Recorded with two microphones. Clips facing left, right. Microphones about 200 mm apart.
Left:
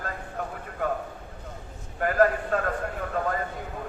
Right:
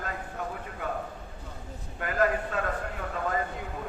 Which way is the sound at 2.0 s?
45° left (ahead or behind).